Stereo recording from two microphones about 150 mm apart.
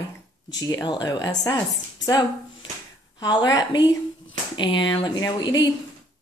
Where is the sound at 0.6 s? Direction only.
25° left (ahead or behind).